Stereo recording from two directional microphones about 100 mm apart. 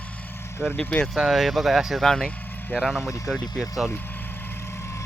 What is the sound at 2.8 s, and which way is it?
Speech, centre (ahead or behind).